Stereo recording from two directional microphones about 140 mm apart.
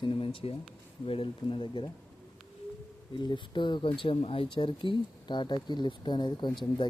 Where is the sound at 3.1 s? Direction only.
35° left (ahead or behind).